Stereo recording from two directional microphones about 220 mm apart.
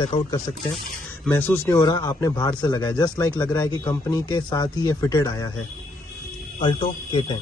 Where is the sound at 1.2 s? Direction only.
10° left (ahead or behind).